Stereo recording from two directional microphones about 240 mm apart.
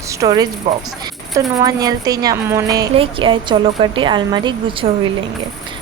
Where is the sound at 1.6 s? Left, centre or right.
Centre.